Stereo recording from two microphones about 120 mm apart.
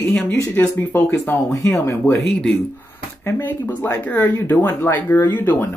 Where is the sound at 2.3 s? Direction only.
5° left (ahead or behind).